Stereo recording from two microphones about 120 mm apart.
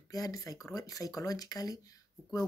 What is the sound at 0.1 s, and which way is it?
Speech, 30° left (ahead or behind).